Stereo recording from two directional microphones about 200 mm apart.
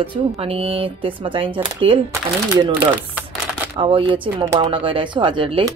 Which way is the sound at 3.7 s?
25° right (ahead or behind).